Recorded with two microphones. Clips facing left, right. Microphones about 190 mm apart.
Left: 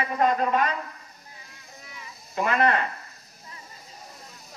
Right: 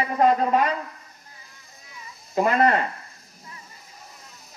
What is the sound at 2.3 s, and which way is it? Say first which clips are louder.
Speech: right 3 dB; 35° right (ahead or behind).